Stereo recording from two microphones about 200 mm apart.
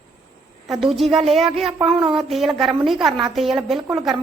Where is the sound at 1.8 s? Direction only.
30° right (ahead or behind).